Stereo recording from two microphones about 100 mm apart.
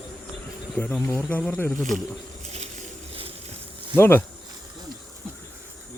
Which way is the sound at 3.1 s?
70° right (ahead or behind).